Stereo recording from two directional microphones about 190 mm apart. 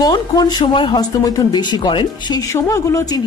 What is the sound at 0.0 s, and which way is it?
Speech, 20° left (ahead or behind).